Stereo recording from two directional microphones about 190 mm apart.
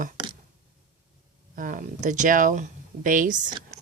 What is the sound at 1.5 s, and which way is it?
Speech, 45° right (ahead or behind).